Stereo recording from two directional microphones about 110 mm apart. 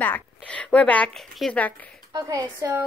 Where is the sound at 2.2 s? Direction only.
35° right (ahead or behind).